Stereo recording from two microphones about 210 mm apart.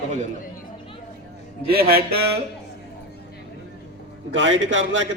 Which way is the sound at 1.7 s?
45° right (ahead or behind).